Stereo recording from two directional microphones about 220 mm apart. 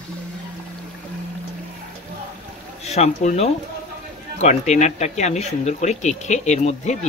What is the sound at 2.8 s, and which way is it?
Speech, 30° left (ahead or behind).